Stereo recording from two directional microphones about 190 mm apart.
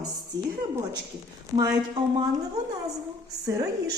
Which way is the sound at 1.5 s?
20° right (ahead or behind).